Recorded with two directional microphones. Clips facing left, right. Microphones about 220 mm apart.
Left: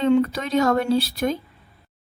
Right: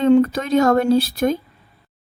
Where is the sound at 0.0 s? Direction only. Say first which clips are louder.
Right 4 dB; 45° right (ahead or behind).